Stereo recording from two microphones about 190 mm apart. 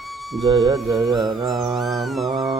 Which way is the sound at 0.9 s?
Centre (ahead or behind).